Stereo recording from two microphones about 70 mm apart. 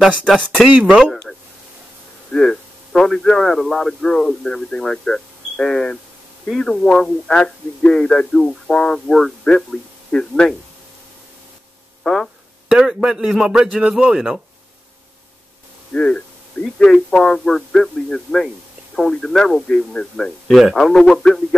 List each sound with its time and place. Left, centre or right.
0.3 s speech: centre
0.7 s a man's voice: centre
2.3 s a man's voice: centre
12.0 s speech: centre
12.6 s a man's voice: centre
15.9 s a man's voice: centre
20.4 s a man's voice: centre